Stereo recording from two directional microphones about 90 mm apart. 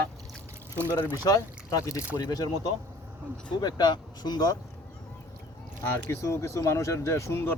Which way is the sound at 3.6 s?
50° left (ahead or behind).